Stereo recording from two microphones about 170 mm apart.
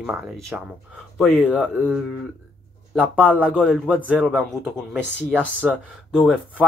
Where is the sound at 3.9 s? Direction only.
10° right (ahead or behind).